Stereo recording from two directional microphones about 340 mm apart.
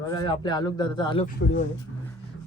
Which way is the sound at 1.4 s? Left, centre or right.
Left.